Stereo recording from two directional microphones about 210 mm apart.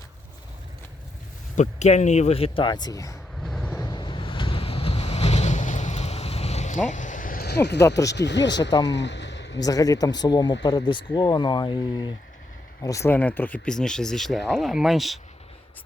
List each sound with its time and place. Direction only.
1.5 s speech: 35° left (ahead or behind); by 3.2 s 15° left (ahead or behind)
3.4 s vehicle: 5° left (ahead or behind)
3.8 s waves: 20° left (ahead or behind); by 7.8 s 50° left (ahead or behind)
7.8 s speech: 15° left (ahead or behind)
8.1 s speech: 55° left (ahead or behind)
8.9 s a sound: 55° left (ahead or behind)
9.6 s speech: 15° left (ahead or behind); by 15.2 s centre (ahead or behind)